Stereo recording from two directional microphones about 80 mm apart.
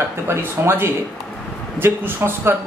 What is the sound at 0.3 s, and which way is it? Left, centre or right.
A man's voice, right.